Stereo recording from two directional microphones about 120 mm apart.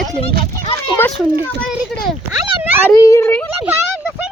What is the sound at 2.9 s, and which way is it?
Speech, 25° left (ahead or behind).